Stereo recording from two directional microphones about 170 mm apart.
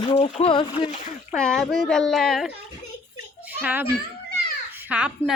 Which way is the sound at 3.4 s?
10° right (ahead or behind).